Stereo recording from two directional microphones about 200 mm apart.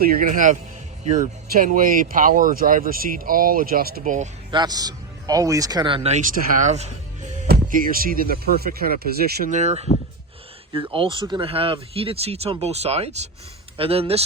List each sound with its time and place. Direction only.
0.0 s speech: 45° right (ahead or behind)
4.5 s a man's voice: 20° right (ahead or behind)
7.4 s speech: 45° right (ahead or behind); by 14.3 s 30° right (ahead or behind)